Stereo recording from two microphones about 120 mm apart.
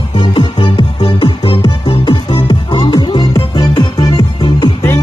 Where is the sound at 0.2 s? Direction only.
40° left (ahead or behind).